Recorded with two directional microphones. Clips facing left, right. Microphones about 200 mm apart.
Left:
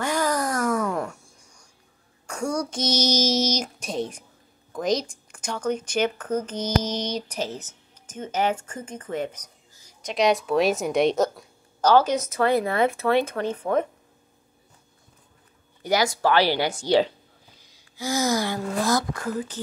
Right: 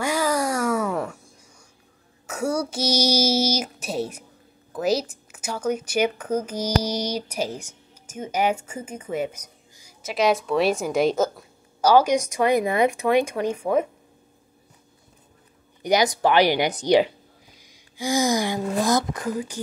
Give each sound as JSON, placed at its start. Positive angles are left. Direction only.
{"t": 0.0, "sound": "a sound", "side_deg": -10}
{"t": 2.2, "sound": "speech", "side_deg": -5}
{"t": 15.8, "sound": "a woman's voice", "side_deg": -20}